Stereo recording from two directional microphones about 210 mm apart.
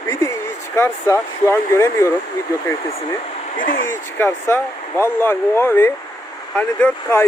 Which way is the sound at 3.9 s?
10° left (ahead or behind).